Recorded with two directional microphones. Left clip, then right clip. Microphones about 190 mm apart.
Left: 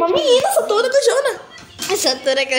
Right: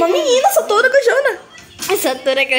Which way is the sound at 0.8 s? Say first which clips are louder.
Right 3 dB; 30° right (ahead or behind).